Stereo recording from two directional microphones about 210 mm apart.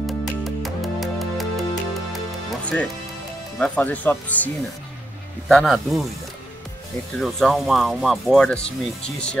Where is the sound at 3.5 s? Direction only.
5° left (ahead or behind).